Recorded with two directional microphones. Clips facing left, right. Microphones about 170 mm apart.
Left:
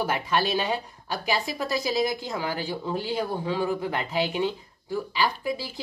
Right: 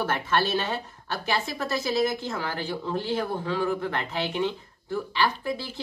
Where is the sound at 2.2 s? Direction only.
15° left (ahead or behind).